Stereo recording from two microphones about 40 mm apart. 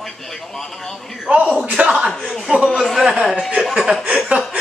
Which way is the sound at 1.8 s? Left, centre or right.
Right.